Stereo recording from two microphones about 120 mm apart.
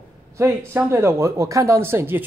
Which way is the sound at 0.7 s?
20° right (ahead or behind).